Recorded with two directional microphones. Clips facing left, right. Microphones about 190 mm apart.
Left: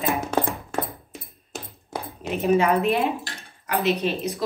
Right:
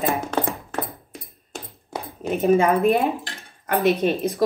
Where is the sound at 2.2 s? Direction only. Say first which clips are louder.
Right 3 dB; 45° right (ahead or behind).